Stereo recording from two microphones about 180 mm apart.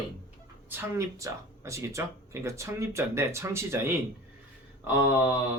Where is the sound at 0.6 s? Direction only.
10° right (ahead or behind).